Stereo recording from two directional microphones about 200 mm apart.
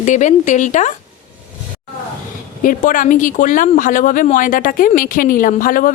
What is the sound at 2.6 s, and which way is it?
Speech, 40° left (ahead or behind).